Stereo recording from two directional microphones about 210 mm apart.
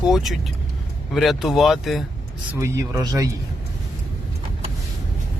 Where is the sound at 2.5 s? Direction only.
15° right (ahead or behind).